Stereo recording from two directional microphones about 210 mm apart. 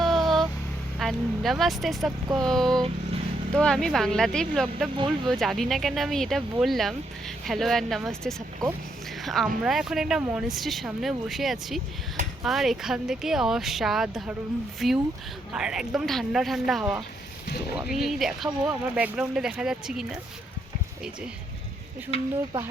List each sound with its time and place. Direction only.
0.0 s vehicle: centre (ahead or behind)
0.9 s speech: centre (ahead or behind)
22.1 s speech: 30° left (ahead or behind)